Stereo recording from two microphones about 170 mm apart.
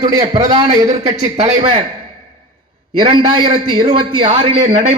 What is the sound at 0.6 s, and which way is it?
Speech, 45° right (ahead or behind).